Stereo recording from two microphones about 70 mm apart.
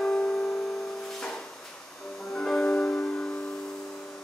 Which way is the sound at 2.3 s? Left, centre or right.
Centre.